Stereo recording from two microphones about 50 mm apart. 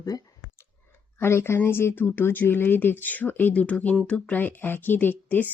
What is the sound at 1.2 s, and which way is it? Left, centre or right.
Speech, left.